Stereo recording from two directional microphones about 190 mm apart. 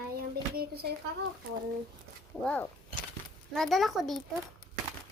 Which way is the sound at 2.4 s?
5° left (ahead or behind).